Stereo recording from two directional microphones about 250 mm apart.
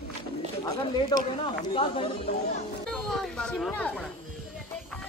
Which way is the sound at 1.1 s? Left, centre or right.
Centre.